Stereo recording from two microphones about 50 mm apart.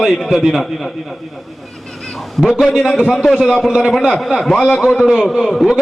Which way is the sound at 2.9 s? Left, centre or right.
Centre.